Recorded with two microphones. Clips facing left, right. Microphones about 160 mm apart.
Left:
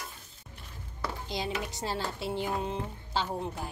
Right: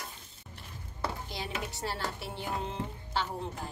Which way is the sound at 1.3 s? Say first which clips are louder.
Left 4 dB; 15° left (ahead or behind).